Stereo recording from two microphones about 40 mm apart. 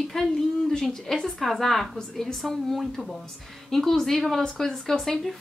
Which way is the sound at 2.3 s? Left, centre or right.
Centre.